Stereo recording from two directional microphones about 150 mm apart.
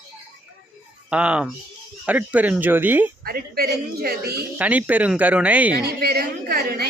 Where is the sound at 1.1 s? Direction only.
5° right (ahead or behind).